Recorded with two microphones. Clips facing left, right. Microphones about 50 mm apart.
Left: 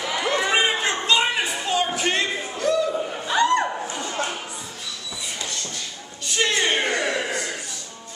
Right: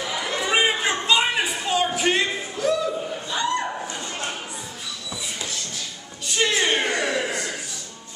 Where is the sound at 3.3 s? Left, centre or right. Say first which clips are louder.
Left 6 dB; left.